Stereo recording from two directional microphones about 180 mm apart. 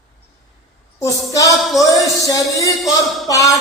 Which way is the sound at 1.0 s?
20° left (ahead or behind).